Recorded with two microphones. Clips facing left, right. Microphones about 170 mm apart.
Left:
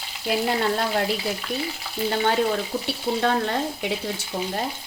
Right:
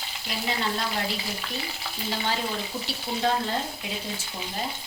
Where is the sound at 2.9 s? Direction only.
60° left (ahead or behind).